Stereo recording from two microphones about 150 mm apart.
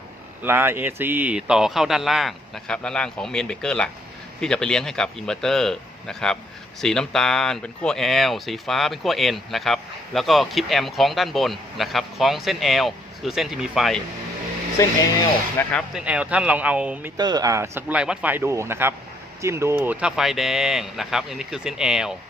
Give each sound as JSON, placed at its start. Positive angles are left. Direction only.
{"t": 0.4, "sound": "speech", "side_deg": -15}
{"t": 14.8, "sound": "speech", "side_deg": 20}
{"t": 16.0, "sound": "speech", "side_deg": -10}
{"t": 17.2, "sound": "speech", "side_deg": -25}